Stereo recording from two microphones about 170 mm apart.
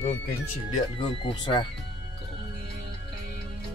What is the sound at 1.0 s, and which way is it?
Speech, 30° left (ahead or behind).